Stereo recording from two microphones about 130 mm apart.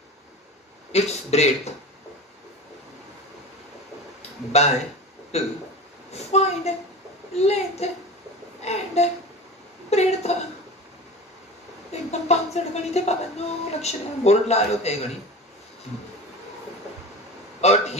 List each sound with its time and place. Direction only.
0.9 s a woman's voice: 55° left (ahead or behind)
4.5 s a woman's voice: 55° left (ahead or behind)
6.1 s a sound: 55° left (ahead or behind)
7.3 s a woman's voice: 55° left (ahead or behind)
11.9 s a woman's voice: 55° left (ahead or behind)
17.6 s a sound: 55° left (ahead or behind)